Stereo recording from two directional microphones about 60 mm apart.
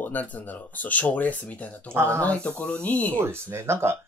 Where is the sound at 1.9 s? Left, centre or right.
Right.